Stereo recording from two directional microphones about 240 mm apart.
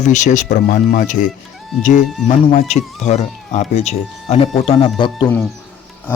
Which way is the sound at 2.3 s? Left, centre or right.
Left.